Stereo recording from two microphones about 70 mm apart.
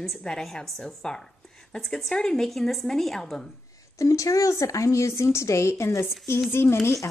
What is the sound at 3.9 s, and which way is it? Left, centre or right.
A woman's voice, left.